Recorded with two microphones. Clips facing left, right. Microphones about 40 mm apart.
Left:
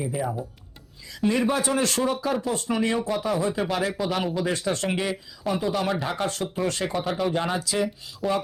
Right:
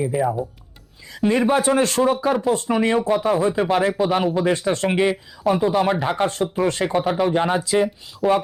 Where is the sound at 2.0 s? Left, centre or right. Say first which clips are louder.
Right 6 dB; right.